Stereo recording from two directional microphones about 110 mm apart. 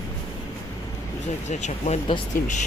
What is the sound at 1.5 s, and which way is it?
Speech, 90° left.